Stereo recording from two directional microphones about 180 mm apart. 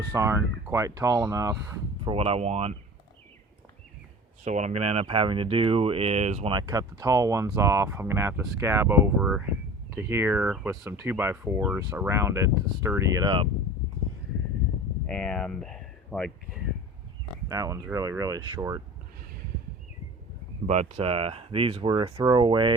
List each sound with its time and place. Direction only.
0.1 s speech: 15° right (ahead or behind)
2.0 s speech: 35° right (ahead or behind)
4.4 s speech: 40° right (ahead or behind)
6.5 s speech: 20° right (ahead or behind)
9.1 s speech: 5° right (ahead or behind)
9.9 s speech: 15° right (ahead or behind)
15.0 s speech: 5° left (ahead or behind)
17.5 s speech: 20° right (ahead or behind)
20.7 s speech: 40° right (ahead or behind)